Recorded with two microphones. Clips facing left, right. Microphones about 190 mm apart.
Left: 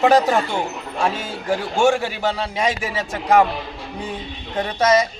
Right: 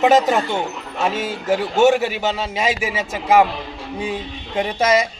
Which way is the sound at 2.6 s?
5° right (ahead or behind).